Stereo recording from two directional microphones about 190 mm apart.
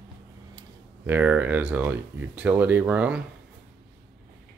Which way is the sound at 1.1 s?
10° right (ahead or behind).